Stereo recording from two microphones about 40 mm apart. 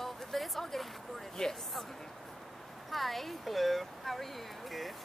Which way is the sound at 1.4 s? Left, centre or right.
Centre.